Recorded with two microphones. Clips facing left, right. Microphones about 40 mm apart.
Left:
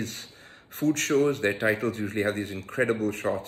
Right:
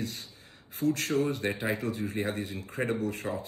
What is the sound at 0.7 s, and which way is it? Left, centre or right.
A man's voice, left.